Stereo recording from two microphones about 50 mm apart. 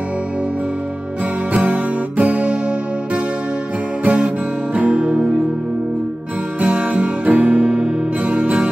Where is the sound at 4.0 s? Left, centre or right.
Right.